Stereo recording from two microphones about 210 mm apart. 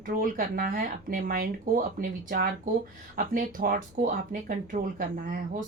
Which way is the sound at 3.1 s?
40° right (ahead or behind).